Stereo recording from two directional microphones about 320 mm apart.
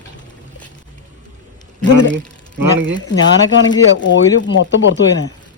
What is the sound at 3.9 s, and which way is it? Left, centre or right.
Speech, left.